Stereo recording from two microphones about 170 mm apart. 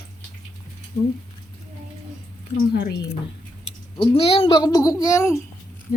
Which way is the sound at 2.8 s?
75° left (ahead or behind).